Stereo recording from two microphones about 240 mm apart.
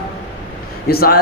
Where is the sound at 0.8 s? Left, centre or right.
Left.